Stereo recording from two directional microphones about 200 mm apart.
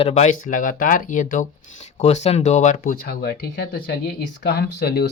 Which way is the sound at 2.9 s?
50° left (ahead or behind).